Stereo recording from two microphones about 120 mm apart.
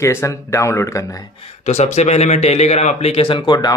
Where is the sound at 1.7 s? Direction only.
70° left (ahead or behind).